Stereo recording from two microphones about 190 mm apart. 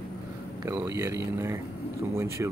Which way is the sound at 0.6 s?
15° right (ahead or behind).